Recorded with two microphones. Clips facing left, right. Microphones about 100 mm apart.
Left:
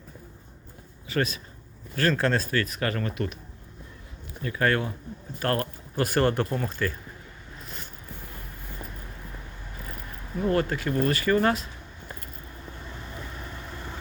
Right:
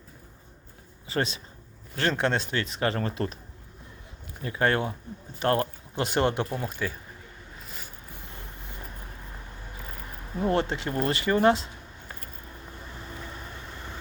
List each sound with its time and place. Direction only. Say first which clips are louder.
1.0 s speech: left 1 dB; 25° right (ahead or behind)
4.4 s speech: even; 25° right (ahead or behind)
10.4 s speech: left 1 dB; 25° right (ahead or behind)